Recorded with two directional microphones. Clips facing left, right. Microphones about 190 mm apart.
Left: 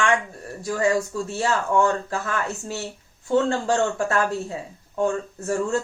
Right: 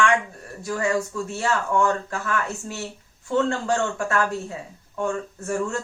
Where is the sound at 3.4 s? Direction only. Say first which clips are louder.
Left 2 dB; 35° left (ahead or behind).